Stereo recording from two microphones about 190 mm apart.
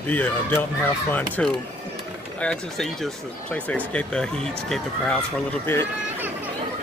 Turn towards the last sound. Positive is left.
turn(degrees=10)  # may be behind; listen again after turning